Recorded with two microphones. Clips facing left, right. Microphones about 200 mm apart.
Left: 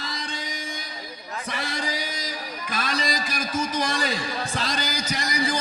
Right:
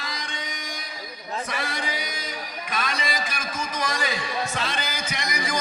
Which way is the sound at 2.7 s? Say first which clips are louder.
Left 1 dB; 35° left (ahead or behind).